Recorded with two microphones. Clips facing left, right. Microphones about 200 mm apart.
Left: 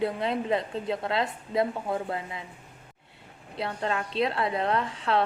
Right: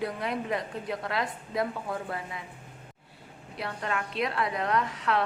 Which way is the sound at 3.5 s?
25° left (ahead or behind).